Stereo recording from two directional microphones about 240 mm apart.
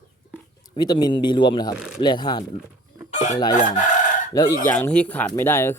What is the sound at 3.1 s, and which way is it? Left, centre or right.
Chicken, left.